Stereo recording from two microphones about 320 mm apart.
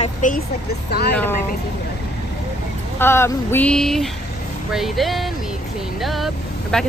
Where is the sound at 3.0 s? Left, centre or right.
Centre.